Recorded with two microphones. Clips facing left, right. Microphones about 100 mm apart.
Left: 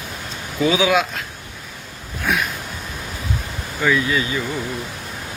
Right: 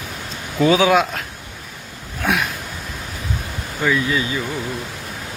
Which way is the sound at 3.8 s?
25° right (ahead or behind).